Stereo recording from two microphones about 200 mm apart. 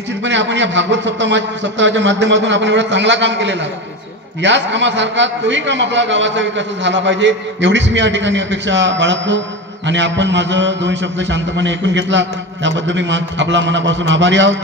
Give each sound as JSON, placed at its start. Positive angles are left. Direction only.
{"t": 0.2, "sound": "a man's voice", "side_deg": -65}